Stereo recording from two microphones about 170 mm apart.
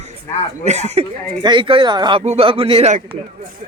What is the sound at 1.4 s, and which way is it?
Speech, 30° right (ahead or behind).